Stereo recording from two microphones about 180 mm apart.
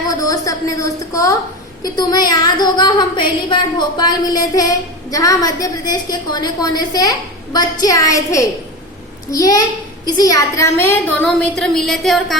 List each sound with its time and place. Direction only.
0.1 s a woman's voice: 20° left (ahead or behind); by 12.4 s centre (ahead or behind)